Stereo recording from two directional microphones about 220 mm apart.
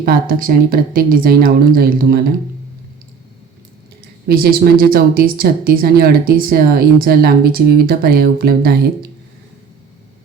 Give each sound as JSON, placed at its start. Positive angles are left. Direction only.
{"t": 0.0, "sound": "speech", "side_deg": -40}
{"t": 4.3, "sound": "speech", "side_deg": -45}